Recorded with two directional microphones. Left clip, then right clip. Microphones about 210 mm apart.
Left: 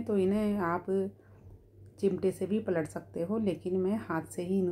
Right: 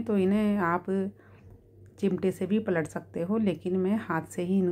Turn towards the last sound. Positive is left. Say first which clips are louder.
# right 3 dB
turn(degrees=-15)  # may be behind; listen again after turning